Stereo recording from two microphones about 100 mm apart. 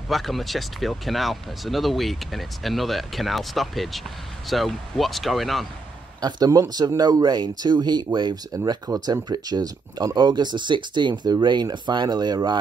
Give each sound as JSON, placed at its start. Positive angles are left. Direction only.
{"t": 0.1, "sound": "speech", "side_deg": 0}
{"t": 6.2, "sound": "speech", "side_deg": -40}